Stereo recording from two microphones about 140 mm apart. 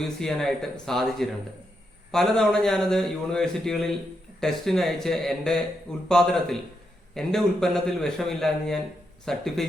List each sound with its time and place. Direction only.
0.0 s a man's voice: 5° left (ahead or behind)